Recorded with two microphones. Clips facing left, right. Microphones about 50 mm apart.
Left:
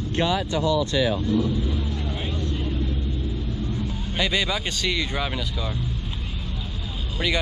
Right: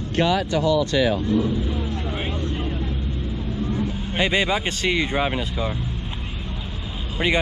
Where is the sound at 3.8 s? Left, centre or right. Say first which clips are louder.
Right 3 dB; right.